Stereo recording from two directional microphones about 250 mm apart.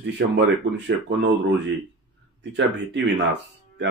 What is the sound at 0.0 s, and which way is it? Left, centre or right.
Speech, right.